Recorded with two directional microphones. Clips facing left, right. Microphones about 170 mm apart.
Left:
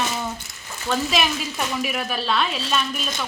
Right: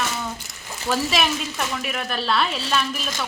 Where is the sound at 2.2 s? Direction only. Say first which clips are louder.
Right 2 dB; centre (ahead or behind).